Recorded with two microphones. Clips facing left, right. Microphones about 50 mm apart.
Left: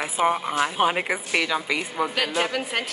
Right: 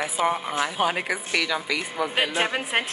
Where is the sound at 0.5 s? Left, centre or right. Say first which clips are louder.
Left 2 dB; left.